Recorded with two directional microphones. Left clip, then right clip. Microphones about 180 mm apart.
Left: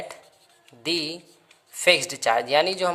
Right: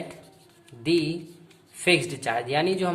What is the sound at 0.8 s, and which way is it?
Speech, 50° left (ahead or behind).